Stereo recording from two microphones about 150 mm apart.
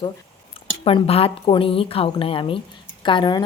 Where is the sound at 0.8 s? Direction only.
40° left (ahead or behind).